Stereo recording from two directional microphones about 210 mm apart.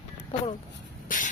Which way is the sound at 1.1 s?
40° left (ahead or behind).